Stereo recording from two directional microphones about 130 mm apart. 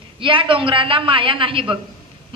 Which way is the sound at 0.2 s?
40° right (ahead or behind).